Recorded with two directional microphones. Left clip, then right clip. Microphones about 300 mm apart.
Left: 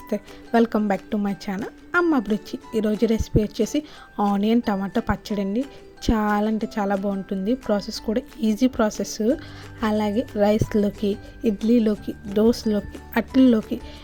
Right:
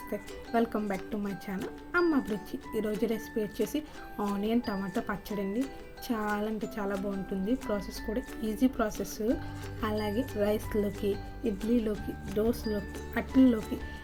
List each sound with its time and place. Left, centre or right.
0.1 s speech: left